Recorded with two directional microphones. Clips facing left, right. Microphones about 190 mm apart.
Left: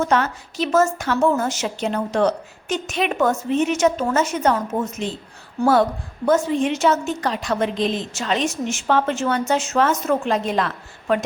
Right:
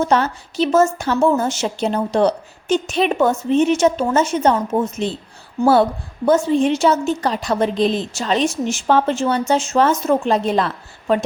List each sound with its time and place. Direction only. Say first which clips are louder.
0.0 s a woman's voice: right 3 dB; 30° right (ahead or behind)
6.2 s a woman's voice: right 3 dB; 30° right (ahead or behind)